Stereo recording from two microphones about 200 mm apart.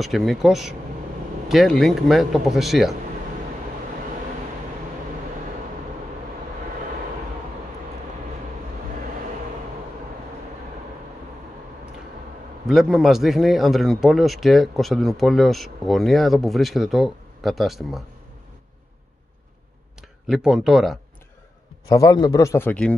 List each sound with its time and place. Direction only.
0.0 s speech: centre (ahead or behind)
12.6 s speech: centre (ahead or behind)
20.0 s speech: centre (ahead or behind)
21.8 s a man's voice: 20° left (ahead or behind)